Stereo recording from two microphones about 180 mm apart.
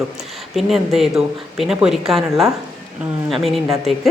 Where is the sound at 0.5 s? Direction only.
Centre (ahead or behind).